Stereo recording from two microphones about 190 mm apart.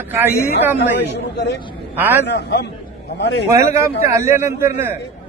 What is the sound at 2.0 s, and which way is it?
Speech, 10° right (ahead or behind).